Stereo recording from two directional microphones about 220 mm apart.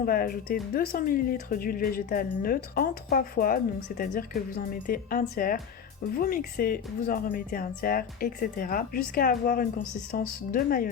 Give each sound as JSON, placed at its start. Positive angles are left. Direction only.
{"t": 0.0, "sound": "speech", "side_deg": 40}